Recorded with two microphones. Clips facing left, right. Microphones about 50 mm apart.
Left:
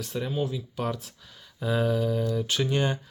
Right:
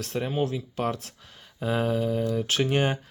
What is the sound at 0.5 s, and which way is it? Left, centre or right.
Speech, right.